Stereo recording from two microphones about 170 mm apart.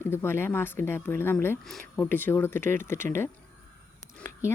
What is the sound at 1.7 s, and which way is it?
Speech, centre (ahead or behind).